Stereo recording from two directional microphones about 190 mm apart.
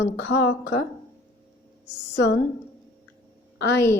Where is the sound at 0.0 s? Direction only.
70° left (ahead or behind).